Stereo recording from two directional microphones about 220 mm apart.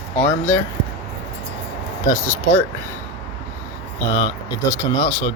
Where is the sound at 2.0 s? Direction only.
15° left (ahead or behind).